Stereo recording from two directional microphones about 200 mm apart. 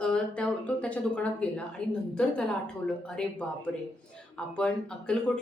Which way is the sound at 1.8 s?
5° left (ahead or behind).